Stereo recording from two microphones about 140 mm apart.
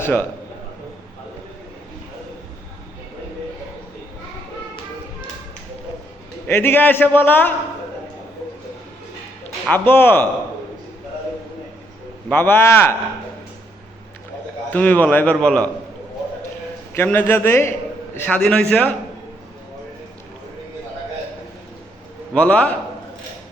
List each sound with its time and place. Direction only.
0.0 s a man's voice: 15° left (ahead or behind)
6.5 s a man's voice: 15° left (ahead or behind)
9.6 s a man's voice: 15° left (ahead or behind)
12.3 s a man's voice: 15° left (ahead or behind)
14.7 s a man's voice: 10° left (ahead or behind)
16.9 s a man's voice: 15° left (ahead or behind)
22.4 s a man's voice: 10° left (ahead or behind)